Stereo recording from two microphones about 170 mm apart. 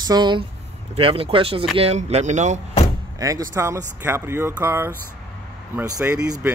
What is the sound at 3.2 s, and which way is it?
Speech, 20° right (ahead or behind).